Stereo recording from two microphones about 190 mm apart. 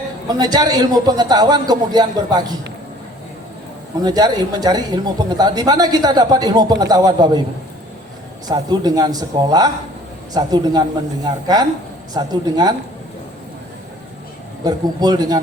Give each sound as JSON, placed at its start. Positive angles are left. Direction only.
{"t": 0.3, "sound": "speech", "side_deg": -20}
{"t": 4.0, "sound": "speech", "side_deg": -20}
{"t": 8.4, "sound": "speech", "side_deg": -20}
{"t": 14.6, "sound": "speech", "side_deg": -20}